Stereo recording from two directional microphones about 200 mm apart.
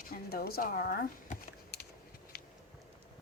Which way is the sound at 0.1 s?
50° left (ahead or behind).